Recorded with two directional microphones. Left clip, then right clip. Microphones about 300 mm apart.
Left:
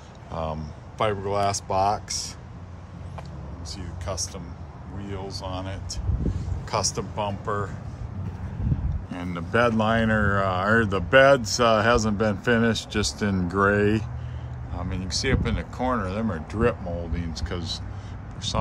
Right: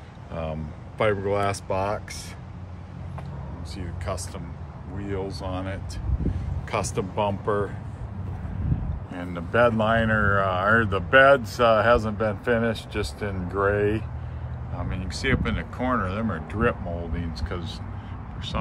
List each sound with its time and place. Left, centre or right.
0.3 s speech: centre
3.7 s speech: centre
9.1 s speech: left
14.9 s speech: centre